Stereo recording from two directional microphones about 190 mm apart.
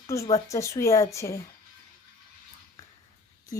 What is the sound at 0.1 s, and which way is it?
Speech, 15° left (ahead or behind).